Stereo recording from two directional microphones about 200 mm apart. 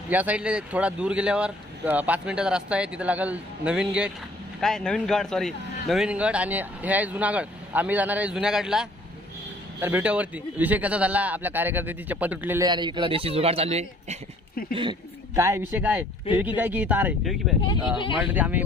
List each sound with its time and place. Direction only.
0.1 s a man's voice: 5° right (ahead or behind)
12.6 s a man's voice: 20° right (ahead or behind)
15.3 s a man's voice: 15° right (ahead or behind)